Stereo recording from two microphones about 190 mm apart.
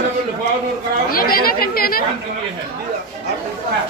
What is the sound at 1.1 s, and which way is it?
Speech, 50° left (ahead or behind).